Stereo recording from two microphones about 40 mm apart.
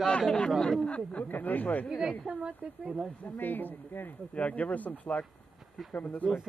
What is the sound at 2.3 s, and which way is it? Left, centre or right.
Speech, right.